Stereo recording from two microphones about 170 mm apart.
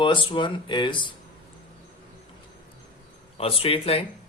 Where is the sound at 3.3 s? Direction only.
35° left (ahead or behind).